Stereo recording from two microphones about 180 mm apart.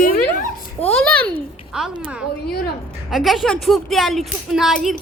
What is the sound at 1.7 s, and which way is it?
A woman's voice, 5° right (ahead or behind).